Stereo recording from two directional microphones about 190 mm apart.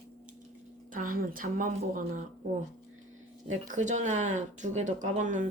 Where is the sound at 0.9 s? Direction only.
45° right (ahead or behind).